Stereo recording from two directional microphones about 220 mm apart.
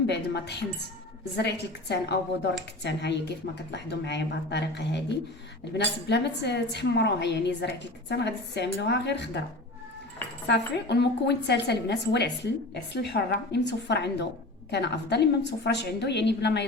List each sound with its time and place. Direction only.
0.1 s a woman's voice: 50° left (ahead or behind)
10.5 s a woman's voice: 50° left (ahead or behind)